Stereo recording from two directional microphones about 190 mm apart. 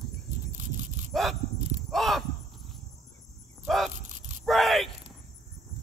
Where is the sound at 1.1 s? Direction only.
Centre (ahead or behind).